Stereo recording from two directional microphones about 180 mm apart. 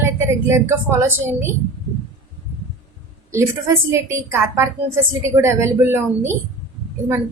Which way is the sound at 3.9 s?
15° right (ahead or behind).